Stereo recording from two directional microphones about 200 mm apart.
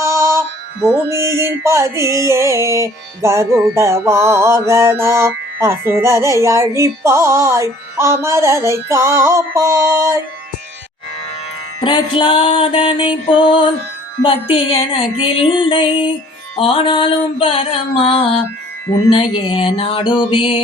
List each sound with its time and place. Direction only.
0.0 s music: 15° right (ahead or behind)
11.8 s music: 20° left (ahead or behind)